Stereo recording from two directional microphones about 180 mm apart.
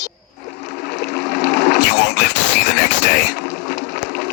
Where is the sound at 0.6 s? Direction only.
70° left (ahead or behind).